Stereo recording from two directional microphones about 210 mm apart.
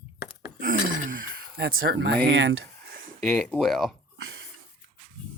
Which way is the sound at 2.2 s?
60° right (ahead or behind).